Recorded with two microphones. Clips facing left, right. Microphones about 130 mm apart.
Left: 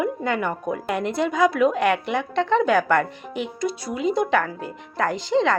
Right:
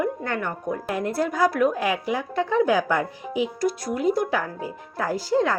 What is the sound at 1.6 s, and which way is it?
Speech, 75° left (ahead or behind).